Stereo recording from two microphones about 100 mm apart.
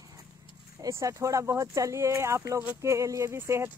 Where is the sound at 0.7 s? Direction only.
35° right (ahead or behind).